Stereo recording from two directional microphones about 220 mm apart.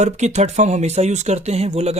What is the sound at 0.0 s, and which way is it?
Speech, 30° right (ahead or behind).